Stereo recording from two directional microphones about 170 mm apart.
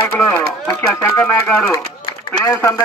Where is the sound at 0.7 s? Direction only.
15° left (ahead or behind).